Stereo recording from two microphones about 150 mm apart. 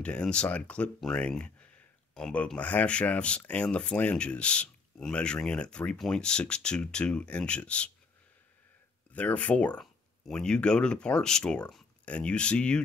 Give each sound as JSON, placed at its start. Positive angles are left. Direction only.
{"t": 0.0, "sound": "speech", "side_deg": 5}
{"t": 9.1, "sound": "speech", "side_deg": 10}